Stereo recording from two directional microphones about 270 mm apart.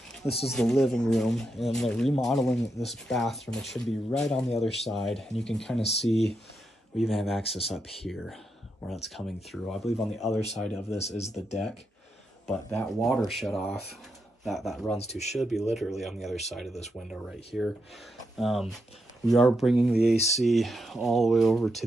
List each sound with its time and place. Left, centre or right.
0.5 s speech: centre
5.8 s speech: left
7.0 s speech: centre
11.0 s speech: left
11.3 s speech: centre